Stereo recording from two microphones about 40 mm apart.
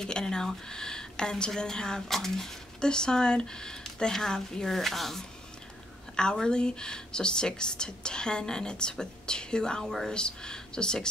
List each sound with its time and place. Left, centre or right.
0.0 s speech: centre
2.8 s speech: centre
6.3 s speech: centre